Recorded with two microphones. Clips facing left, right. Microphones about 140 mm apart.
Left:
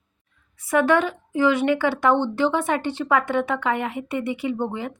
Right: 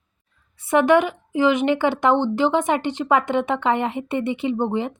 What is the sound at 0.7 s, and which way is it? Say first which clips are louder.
Speech: right 3 dB; 20° right (ahead or behind).